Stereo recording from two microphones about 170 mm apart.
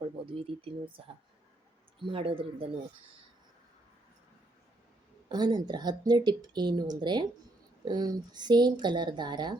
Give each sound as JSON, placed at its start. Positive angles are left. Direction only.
{"t": 0.3, "sound": "speech", "side_deg": -35}
{"t": 5.3, "sound": "speech", "side_deg": -25}